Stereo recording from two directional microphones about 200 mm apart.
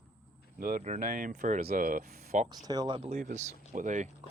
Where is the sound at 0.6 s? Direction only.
45° right (ahead or behind).